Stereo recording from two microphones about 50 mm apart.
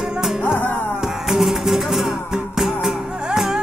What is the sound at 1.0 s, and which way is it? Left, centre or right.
Music, centre.